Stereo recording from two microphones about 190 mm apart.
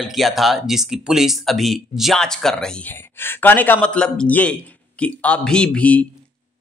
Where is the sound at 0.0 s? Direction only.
Centre (ahead or behind).